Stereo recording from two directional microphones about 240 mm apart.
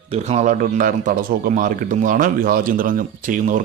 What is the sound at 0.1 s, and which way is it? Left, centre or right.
A man's voice, right.